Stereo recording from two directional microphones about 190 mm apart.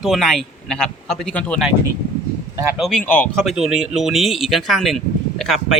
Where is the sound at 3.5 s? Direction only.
5° right (ahead or behind).